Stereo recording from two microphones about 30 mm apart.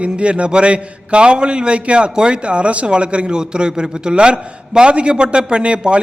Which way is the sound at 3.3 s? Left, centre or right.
Right.